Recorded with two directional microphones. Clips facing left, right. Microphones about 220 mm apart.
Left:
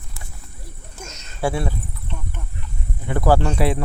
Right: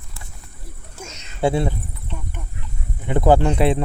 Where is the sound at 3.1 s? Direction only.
20° right (ahead or behind).